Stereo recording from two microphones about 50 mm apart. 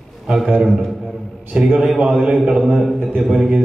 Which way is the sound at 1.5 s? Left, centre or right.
Centre.